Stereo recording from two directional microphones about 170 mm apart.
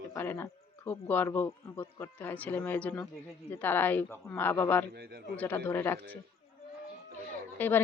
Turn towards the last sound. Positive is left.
turn(degrees=10)  # may be behind; listen again after turning